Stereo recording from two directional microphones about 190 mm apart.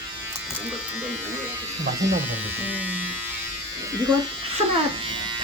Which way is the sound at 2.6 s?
10° right (ahead or behind).